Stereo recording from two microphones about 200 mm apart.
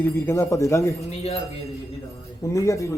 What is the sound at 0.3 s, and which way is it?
Speech, 15° left (ahead or behind).